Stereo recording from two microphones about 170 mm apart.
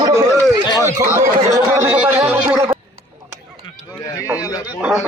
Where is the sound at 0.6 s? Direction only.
25° left (ahead or behind).